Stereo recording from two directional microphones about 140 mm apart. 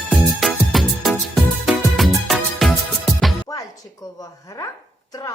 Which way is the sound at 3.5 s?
25° left (ahead or behind).